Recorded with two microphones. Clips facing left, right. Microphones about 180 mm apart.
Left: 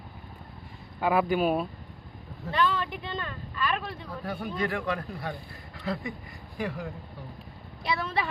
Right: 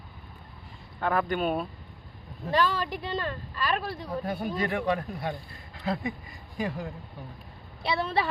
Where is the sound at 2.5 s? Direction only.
40° right (ahead or behind).